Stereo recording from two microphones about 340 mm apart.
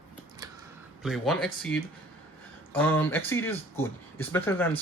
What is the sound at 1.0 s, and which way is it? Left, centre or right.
Speech, centre.